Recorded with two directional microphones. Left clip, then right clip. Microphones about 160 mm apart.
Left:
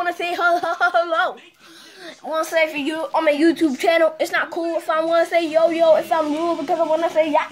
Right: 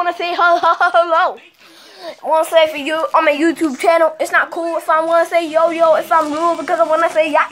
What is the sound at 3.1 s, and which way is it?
A woman's voice, 15° left (ahead or behind).